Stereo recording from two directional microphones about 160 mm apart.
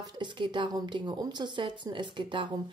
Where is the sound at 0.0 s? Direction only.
30° right (ahead or behind).